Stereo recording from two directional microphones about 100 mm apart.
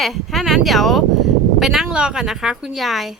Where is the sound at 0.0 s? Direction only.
Centre (ahead or behind).